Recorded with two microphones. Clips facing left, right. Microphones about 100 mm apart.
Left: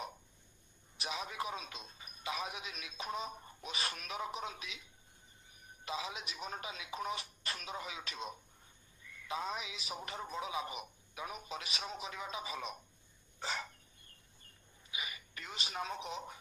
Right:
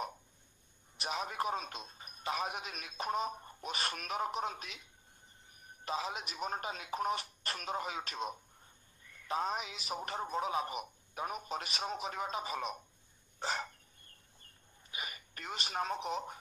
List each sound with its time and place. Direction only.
1.0 s a man's voice: 45° right (ahead or behind)
5.9 s a man's voice: 45° right (ahead or behind)
13.4 s dog: 40° right (ahead or behind)
14.9 s speech: 40° right (ahead or behind)